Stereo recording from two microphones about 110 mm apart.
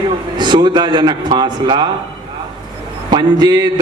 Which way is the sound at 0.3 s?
40° right (ahead or behind).